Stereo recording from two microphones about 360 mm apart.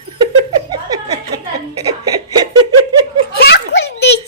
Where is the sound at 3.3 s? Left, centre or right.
Left.